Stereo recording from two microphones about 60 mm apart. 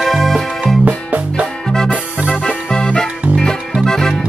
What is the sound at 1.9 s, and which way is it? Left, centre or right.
Music, centre.